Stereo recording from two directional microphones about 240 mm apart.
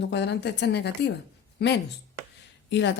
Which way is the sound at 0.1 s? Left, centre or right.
Left.